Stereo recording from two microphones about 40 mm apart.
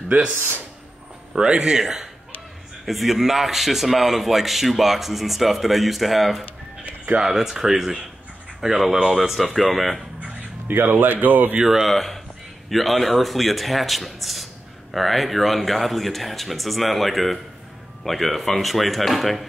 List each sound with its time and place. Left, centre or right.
0.1 s speech: right
1.3 s speech: centre
2.8 s speech: centre
10.7 s speech: right
11.6 s speech: centre
11.9 s speech: centre